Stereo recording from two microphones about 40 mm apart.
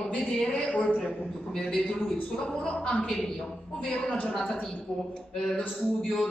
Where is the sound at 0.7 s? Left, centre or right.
Left.